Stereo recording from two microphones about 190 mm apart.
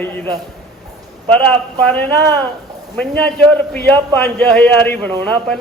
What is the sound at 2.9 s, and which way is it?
A man's voice, 5° left (ahead or behind).